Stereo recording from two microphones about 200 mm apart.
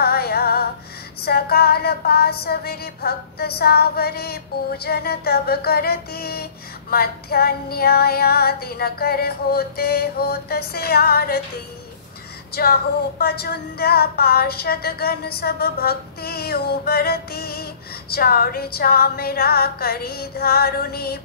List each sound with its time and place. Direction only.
0.0 s music: 50° left (ahead or behind)
1.2 s female singing: 50° left (ahead or behind)
12.5 s female singing: 50° left (ahead or behind)